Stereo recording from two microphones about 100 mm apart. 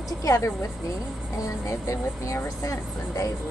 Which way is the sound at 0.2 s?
30° left (ahead or behind).